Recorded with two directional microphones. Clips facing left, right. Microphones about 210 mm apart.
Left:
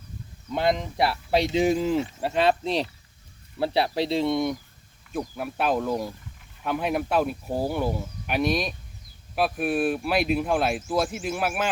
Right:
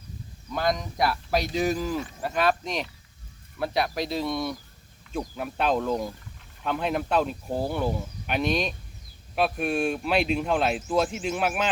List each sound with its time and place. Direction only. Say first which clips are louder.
0.5 s speech: left 3 dB; 25° left (ahead or behind)
5.1 s speech: left 1 dB; 5° left (ahead or behind)